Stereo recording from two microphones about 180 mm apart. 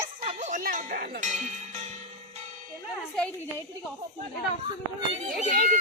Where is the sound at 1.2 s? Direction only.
40° right (ahead or behind).